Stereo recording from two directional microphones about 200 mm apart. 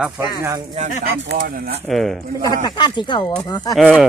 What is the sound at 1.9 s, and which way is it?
Speech, centre (ahead or behind).